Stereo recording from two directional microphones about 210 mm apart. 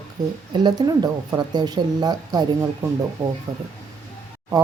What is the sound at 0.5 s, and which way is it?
Speech, 20° right (ahead or behind).